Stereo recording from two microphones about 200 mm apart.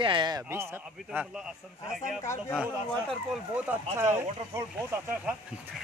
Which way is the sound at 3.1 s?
Centre (ahead or behind).